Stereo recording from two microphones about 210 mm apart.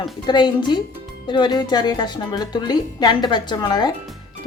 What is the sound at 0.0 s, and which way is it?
A woman's voice, 20° left (ahead or behind).